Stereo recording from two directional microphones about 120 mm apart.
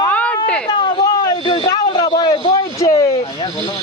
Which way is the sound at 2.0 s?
35° left (ahead or behind).